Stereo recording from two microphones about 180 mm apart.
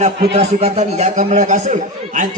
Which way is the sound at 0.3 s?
35° right (ahead or behind).